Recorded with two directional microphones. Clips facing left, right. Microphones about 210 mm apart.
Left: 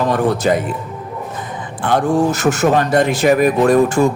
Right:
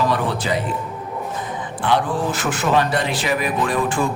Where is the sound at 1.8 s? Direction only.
45° left (ahead or behind).